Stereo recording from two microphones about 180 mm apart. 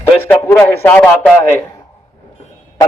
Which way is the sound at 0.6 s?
10° left (ahead or behind).